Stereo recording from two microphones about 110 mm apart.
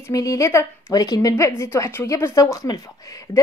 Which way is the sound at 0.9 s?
35° left (ahead or behind).